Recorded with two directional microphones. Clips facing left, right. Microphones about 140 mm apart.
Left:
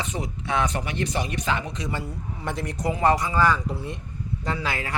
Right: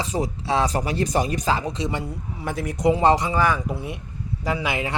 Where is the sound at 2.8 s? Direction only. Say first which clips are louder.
Right 4 dB; 25° right (ahead or behind).